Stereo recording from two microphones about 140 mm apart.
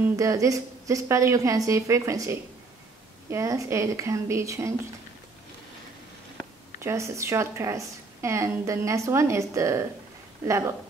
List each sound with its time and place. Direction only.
0.1 s speech: 25° right (ahead or behind)
6.8 s speech: 20° right (ahead or behind)